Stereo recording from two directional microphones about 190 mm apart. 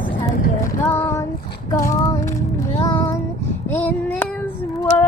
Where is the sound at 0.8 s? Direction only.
15° left (ahead or behind).